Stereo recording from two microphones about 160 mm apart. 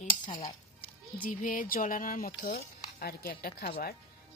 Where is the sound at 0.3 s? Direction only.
30° left (ahead or behind).